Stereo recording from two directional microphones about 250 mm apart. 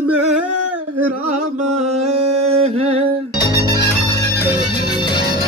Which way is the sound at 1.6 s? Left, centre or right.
Right.